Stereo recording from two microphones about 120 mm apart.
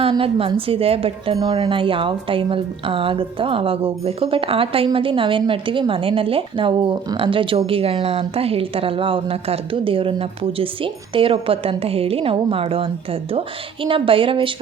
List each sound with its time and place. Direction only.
0.0 s a woman's voice: 50° right (ahead or behind)
1.4 s a woman's voice: 35° right (ahead or behind)